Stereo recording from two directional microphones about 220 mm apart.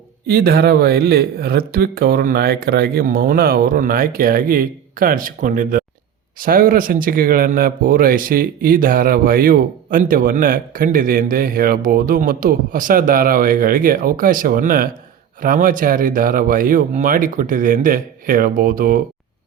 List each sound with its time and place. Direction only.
0.3 s speech: 45° right (ahead or behind)